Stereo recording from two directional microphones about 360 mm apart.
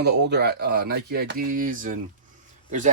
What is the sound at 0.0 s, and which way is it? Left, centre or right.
Speech, right.